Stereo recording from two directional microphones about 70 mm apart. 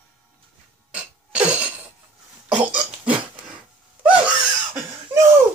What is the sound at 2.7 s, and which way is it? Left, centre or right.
Burping, right.